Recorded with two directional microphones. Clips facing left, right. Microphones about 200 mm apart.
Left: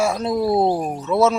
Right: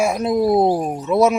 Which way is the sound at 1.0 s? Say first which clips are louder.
Right 2 dB; 15° right (ahead or behind).